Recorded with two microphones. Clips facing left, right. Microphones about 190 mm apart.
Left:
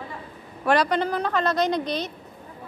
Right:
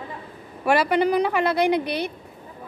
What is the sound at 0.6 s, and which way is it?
A woman's voice, 10° right (ahead or behind).